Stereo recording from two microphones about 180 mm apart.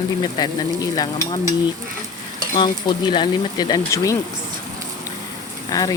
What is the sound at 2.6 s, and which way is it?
Speech, 25° left (ahead or behind).